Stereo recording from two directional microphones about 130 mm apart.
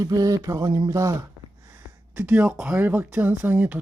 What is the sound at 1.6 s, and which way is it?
Speech, 20° right (ahead or behind).